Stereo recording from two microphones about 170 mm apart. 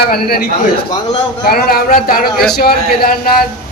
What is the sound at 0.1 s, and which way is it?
A man's voice, 65° left (ahead or behind).